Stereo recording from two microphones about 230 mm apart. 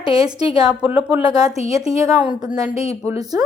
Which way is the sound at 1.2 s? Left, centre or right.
Centre.